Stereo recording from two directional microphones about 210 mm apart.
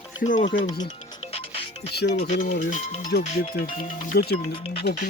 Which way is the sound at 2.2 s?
35° left (ahead or behind).